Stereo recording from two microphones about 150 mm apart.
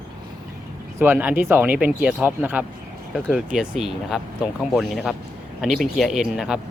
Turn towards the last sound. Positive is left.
turn(degrees=0)  # may be behind; listen again after turning